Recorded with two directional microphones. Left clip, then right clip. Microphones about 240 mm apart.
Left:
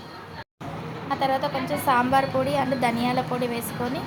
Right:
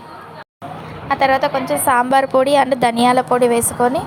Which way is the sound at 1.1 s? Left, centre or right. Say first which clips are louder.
Right 10 dB; right.